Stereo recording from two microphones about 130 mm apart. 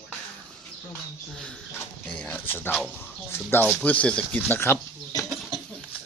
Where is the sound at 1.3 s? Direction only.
5° left (ahead or behind).